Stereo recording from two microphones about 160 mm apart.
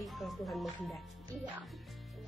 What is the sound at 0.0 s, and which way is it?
Music, centre (ahead or behind).